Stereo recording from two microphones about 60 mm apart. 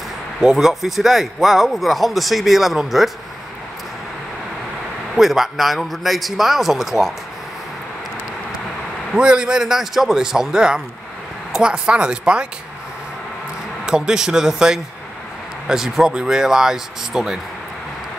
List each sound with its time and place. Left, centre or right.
0.4 s speech: centre
5.1 s speech: centre
9.1 s speech: centre
13.8 s speech: centre